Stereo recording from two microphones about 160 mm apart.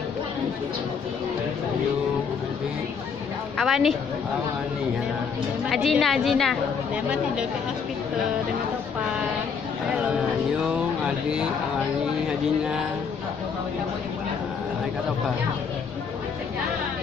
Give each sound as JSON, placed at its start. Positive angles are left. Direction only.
{"t": 3.5, "sound": "a woman's voice", "side_deg": 0}
{"t": 5.7, "sound": "a woman's voice", "side_deg": 0}